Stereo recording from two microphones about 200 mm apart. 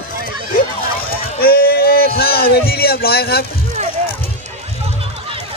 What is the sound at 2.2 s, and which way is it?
Vehicle, 50° left (ahead or behind).